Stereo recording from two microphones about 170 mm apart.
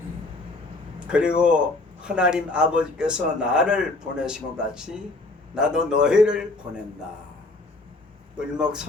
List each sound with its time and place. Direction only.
0.9 s a man's voice: 5° right (ahead or behind)
8.5 s a man's voice: 5° right (ahead or behind)